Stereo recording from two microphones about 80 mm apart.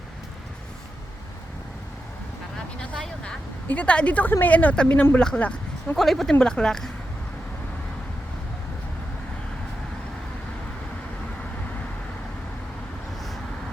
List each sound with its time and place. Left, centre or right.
3.7 s speech: centre
6.0 s speech: centre